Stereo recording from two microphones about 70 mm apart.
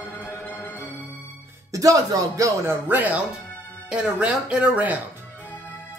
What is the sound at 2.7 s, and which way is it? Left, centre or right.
Speech, right.